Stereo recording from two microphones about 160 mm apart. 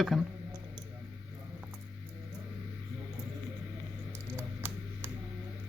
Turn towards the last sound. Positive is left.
turn(degrees=-15)  # may be behind; listen again after turning